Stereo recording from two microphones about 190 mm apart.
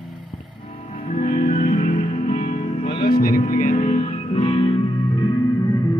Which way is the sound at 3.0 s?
50° left (ahead or behind).